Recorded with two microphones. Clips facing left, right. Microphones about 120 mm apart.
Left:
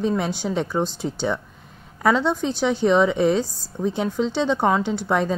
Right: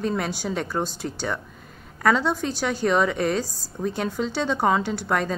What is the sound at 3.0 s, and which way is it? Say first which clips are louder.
A woman's voice: left 4 dB; 15° left (ahead or behind).